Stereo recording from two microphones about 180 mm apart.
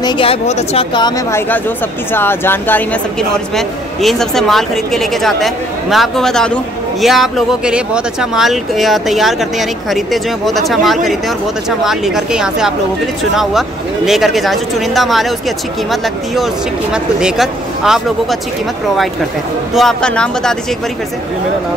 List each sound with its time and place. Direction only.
0.0 s speech: 30° left (ahead or behind); by 15.3 s centre (ahead or behind)
16.9 s speech: 5° right (ahead or behind)
19.7 s speech: centre (ahead or behind)